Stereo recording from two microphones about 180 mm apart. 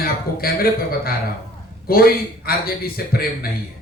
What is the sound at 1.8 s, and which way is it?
Speech, 55° left (ahead or behind).